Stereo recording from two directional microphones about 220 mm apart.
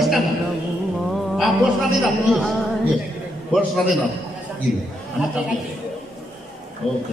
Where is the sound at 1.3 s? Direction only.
Centre (ahead or behind).